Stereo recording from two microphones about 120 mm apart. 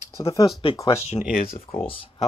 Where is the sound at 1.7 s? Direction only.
50° left (ahead or behind).